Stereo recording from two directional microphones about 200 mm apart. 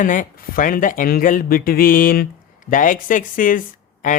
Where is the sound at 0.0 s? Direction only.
40° left (ahead or behind).